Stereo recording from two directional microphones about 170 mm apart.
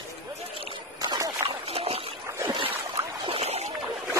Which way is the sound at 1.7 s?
35° right (ahead or behind).